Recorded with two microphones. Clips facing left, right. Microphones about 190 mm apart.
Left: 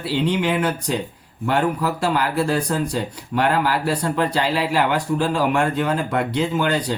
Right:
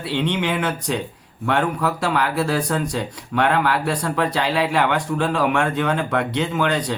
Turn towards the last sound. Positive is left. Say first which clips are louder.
# even
turn(degrees=0)  # may be behind; listen again after turning